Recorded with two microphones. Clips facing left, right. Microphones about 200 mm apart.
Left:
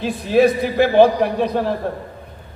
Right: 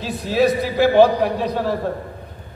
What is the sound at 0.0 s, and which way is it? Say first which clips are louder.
A man's voice: left 3 dB; 55° left (ahead or behind).